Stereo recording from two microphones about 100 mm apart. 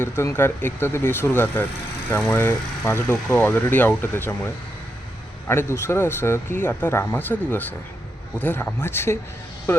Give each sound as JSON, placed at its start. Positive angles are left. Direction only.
{"t": 0.0, "sound": "speech", "side_deg": 25}